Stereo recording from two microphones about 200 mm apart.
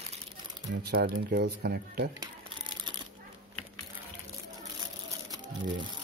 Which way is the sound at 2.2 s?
20° right (ahead or behind).